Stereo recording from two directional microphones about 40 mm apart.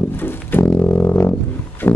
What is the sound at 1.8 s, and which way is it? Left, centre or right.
Music, left.